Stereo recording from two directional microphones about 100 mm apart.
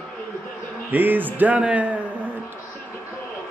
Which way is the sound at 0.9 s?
20° right (ahead or behind).